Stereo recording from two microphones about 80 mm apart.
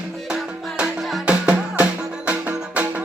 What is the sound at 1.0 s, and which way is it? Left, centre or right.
Music, centre.